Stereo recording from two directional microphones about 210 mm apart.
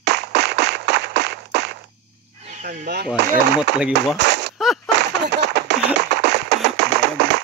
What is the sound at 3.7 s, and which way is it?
Speech, 55° right (ahead or behind).